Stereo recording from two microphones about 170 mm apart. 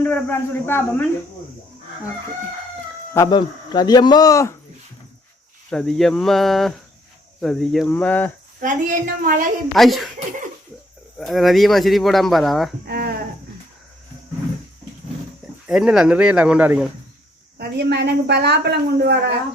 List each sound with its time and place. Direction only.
0.0 s speech: 10° left (ahead or behind)
3.2 s speech: 25° left (ahead or behind)
5.7 s speech: centre (ahead or behind)
8.6 s a woman's voice: 55° right (ahead or behind)
9.7 s speech: centre (ahead or behind)
11.2 s speech: centre (ahead or behind)
12.9 s speech: 65° right (ahead or behind)
15.6 s speech: 5° right (ahead or behind)
17.6 s a woman's voice: 75° right (ahead or behind)